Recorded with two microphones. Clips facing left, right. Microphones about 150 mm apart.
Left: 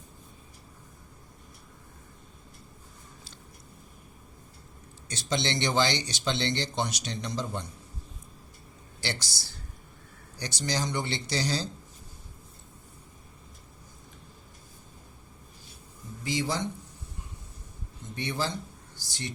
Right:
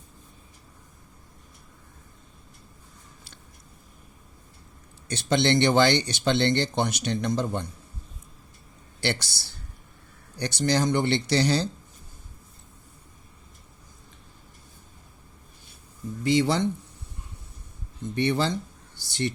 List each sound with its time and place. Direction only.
5.0 s speech: 60° right (ahead or behind)
9.0 s speech: 60° right (ahead or behind)
16.2 s speech: 65° right (ahead or behind)
18.1 s speech: 65° right (ahead or behind)